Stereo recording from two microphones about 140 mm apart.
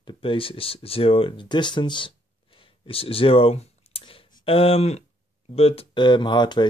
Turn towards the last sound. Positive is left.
turn(degrees=30)  # may be behind; listen again after turning